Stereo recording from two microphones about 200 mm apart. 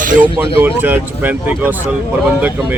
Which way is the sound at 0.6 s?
10° right (ahead or behind).